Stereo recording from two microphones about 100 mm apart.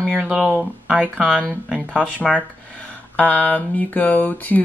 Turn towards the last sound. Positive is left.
turn(degrees=15)  # may be behind; listen again after turning